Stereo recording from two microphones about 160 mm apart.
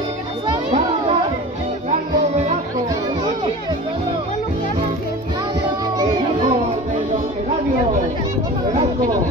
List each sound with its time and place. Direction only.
1.9 s music: 45° right (ahead or behind)